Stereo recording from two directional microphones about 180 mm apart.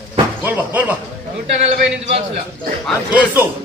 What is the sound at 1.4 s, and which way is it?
Speech, 35° right (ahead or behind).